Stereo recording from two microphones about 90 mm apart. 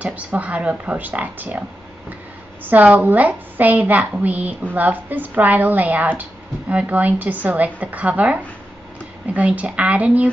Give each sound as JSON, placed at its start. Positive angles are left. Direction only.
{"t": 0.0, "sound": "a woman's voice", "side_deg": -15}
{"t": 2.6, "sound": "a woman's voice", "side_deg": -15}